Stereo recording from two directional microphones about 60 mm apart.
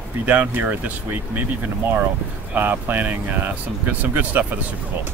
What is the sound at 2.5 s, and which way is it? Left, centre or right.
Speech, right.